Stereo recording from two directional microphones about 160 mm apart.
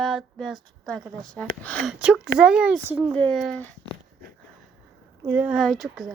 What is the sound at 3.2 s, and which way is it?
Speech, 5° left (ahead or behind).